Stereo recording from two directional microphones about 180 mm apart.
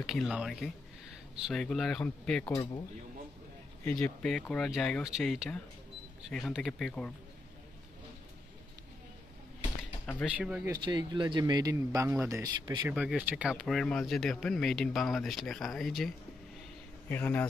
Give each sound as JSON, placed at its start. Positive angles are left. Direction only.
{"t": 0.0, "sound": "speech", "side_deg": 0}
{"t": 2.4, "sound": "speech", "side_deg": 25}
{"t": 3.8, "sound": "speech", "side_deg": 5}
{"t": 10.2, "sound": "speech", "side_deg": -5}
{"t": 10.7, "sound": "speech", "side_deg": -25}
{"t": 12.9, "sound": "speech", "side_deg": -5}
{"t": 17.1, "sound": "speech", "side_deg": 10}